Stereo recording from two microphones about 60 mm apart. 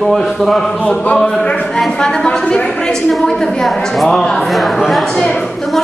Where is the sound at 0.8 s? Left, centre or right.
Left.